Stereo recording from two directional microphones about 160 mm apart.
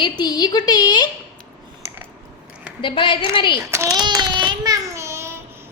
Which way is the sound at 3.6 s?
15° right (ahead or behind).